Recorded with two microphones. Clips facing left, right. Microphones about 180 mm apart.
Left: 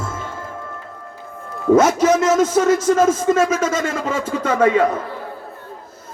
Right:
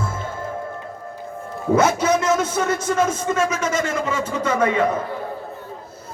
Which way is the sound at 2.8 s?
45° left (ahead or behind).